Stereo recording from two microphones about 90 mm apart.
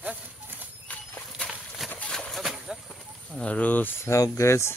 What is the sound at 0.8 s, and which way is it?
Horse, 15° left (ahead or behind).